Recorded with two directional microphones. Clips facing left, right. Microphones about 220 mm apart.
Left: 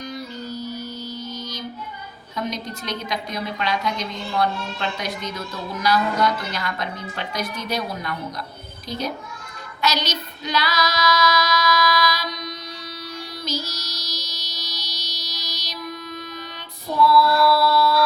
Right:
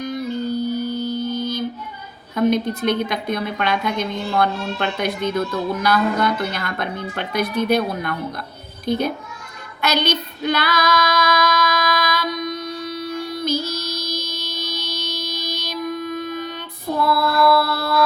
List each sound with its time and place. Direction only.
0.0 s music: 55° right (ahead or behind)
2.3 s a woman's voice: 55° right (ahead or behind)
9.8 s female singing: 55° right (ahead or behind)